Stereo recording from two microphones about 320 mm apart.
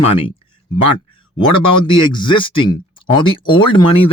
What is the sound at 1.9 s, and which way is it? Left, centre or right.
Speech, centre.